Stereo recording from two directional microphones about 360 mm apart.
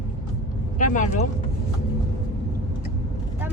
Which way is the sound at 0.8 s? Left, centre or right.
Left.